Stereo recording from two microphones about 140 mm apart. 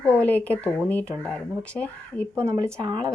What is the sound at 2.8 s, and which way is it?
Speech, 30° right (ahead or behind).